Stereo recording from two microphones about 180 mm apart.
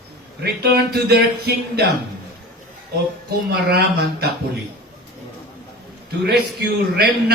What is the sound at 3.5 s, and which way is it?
Speech, 60° right (ahead or behind).